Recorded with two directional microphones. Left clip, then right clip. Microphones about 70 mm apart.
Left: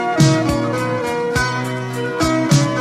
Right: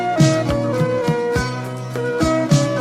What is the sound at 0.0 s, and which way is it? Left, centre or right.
Music, left.